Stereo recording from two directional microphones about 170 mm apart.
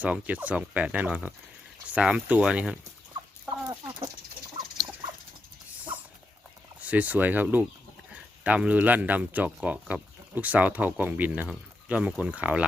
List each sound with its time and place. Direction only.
0.0 s speech: 10° right (ahead or behind)
3.7 s chicken: 20° right (ahead or behind)
6.7 s speech: 10° right (ahead or behind)